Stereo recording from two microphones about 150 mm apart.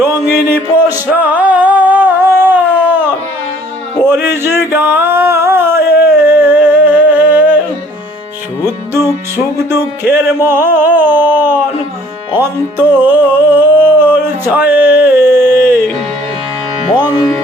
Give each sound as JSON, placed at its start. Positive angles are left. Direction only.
{"t": 0.0, "sound": "a sound", "side_deg": -15}
{"t": 6.2, "sound": "music", "side_deg": -10}
{"t": 8.6, "sound": "music", "side_deg": -15}
{"t": 16.9, "sound": "music", "side_deg": 25}